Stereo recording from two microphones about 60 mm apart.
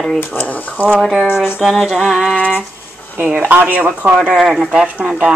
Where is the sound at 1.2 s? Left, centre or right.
Left.